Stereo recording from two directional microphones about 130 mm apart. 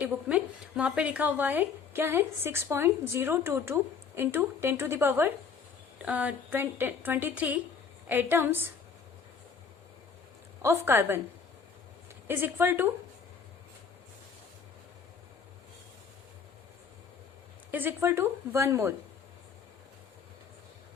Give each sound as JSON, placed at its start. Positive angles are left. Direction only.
{"t": 0.0, "sound": "a woman's voice", "side_deg": -10}
{"t": 10.6, "sound": "a woman's voice", "side_deg": -20}
{"t": 12.3, "sound": "a woman's voice", "side_deg": -15}
{"t": 17.7, "sound": "a woman's voice", "side_deg": -15}